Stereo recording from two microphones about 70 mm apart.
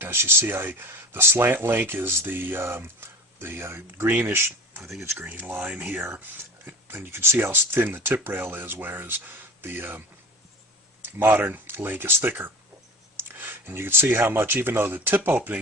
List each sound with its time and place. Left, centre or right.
0.0 s speech: right
5.1 s speech: right
11.0 s speech: right